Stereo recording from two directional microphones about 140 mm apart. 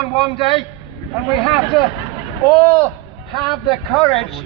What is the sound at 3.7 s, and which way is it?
Speech, 25° left (ahead or behind).